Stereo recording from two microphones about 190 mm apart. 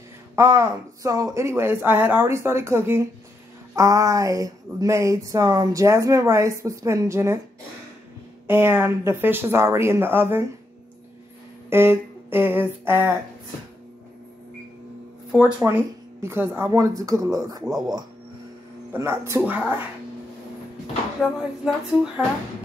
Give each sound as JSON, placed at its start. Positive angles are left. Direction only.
{"t": 0.4, "sound": "speech", "side_deg": -15}
{"t": 8.5, "sound": "speech", "side_deg": -10}
{"t": 11.7, "sound": "speech", "side_deg": -10}
{"t": 15.6, "sound": "speech", "side_deg": -15}
{"t": 17.6, "sound": "a sound", "side_deg": 0}
{"t": 18.9, "sound": "speech", "side_deg": -15}
{"t": 21.2, "sound": "a sound", "side_deg": 0}